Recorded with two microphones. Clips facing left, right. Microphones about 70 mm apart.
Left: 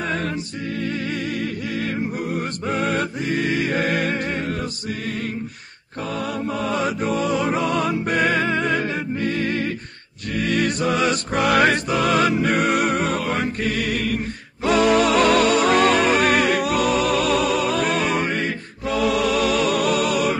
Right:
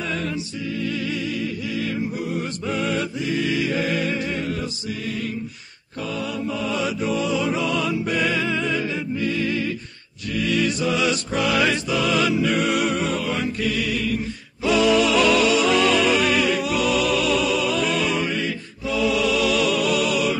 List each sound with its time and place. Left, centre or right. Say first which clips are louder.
2.3 s music: left 1 dB; left
6.1 s music: left 2 dB; left